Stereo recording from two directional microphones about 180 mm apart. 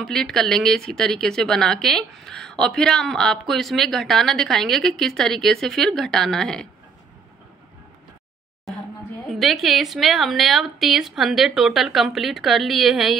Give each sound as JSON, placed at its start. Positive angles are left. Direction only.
{"t": 0.0, "sound": "speech", "side_deg": 0}
{"t": 9.3, "sound": "speech", "side_deg": 0}